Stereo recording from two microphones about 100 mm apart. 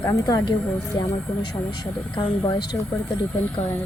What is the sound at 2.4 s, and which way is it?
Speech, 40° left (ahead or behind).